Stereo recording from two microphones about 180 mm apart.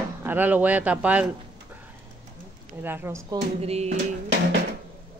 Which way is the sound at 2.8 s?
10° right (ahead or behind).